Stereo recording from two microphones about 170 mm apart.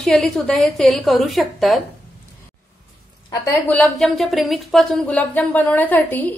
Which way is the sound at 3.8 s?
5° left (ahead or behind).